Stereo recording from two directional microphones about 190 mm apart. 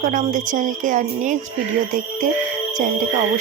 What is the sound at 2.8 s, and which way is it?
Music, 40° right (ahead or behind).